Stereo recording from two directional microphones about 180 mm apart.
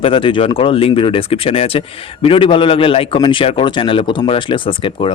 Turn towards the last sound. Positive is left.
turn(degrees=30)  # may be behind; listen again after turning